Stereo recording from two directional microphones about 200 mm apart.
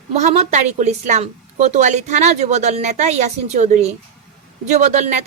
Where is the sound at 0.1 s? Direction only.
35° right (ahead or behind).